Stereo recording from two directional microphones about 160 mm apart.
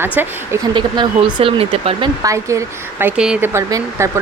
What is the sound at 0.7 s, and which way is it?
Speech, 30° right (ahead or behind).